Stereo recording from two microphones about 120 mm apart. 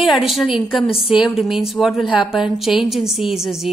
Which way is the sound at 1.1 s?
5° right (ahead or behind).